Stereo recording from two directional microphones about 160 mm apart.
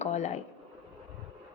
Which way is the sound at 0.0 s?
45° left (ahead or behind).